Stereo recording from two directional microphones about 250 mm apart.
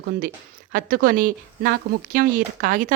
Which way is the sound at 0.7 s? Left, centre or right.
Right.